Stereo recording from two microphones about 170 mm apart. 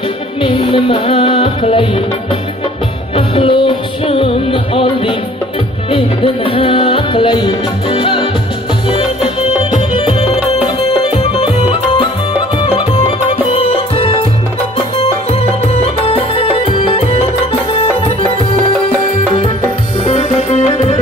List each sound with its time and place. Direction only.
0.4 s music: 30° left (ahead or behind)
3.2 s music: 30° left (ahead or behind)
9.6 s music: 30° left (ahead or behind)
15.7 s music: 35° left (ahead or behind)
20.1 s music: 40° left (ahead or behind)